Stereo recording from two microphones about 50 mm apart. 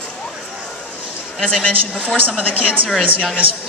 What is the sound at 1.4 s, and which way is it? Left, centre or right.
Speech, centre.